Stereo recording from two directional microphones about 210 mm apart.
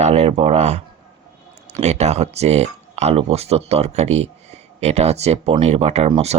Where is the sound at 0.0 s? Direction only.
30° right (ahead or behind).